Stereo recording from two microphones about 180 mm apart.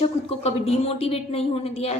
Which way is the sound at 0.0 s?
35° left (ahead or behind).